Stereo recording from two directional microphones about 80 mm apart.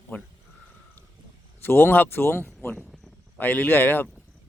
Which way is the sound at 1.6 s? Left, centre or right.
Left.